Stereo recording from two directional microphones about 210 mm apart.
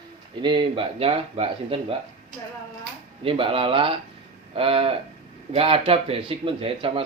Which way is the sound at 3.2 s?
25° right (ahead or behind).